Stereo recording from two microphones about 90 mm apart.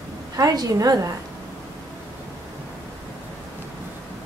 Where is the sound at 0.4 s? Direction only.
40° right (ahead or behind).